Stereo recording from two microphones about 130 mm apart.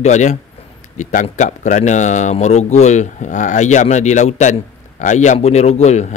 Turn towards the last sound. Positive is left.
turn(degrees=60)  # may be behind; listen again after turning